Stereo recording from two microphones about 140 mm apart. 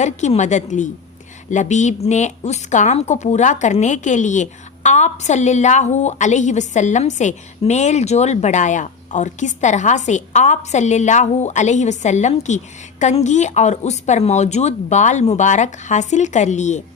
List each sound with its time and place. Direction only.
0.0 s a woman's voice: 55° left (ahead or behind)